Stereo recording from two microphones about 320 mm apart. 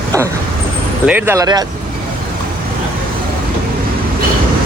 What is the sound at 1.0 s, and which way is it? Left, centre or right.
Speech, centre.